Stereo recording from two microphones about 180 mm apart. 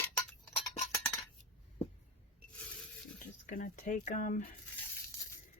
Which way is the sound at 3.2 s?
45° left (ahead or behind).